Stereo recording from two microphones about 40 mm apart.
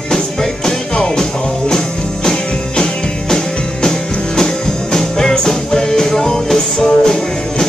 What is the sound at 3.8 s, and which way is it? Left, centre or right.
Music, centre.